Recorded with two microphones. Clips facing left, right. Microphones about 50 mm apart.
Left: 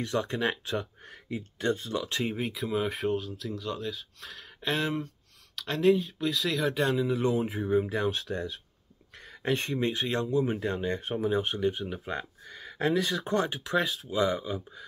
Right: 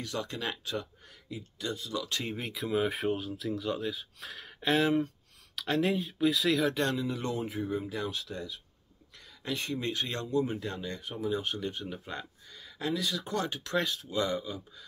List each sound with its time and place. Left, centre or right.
0.0 s speech: left
2.2 s speech: centre; by 8.5 s left
9.1 s a sound: left
9.8 s speech: left
11.7 s speech: centre
12.1 s a sound: left
12.6 s speech: left